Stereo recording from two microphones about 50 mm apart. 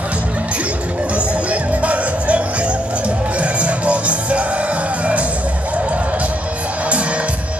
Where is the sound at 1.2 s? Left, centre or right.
Right.